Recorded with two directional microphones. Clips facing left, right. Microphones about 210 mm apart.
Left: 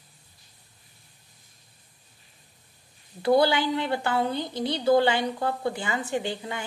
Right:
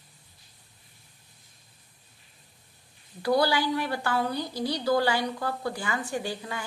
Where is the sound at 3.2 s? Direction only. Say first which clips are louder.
Left 3 dB; 25° left (ahead or behind).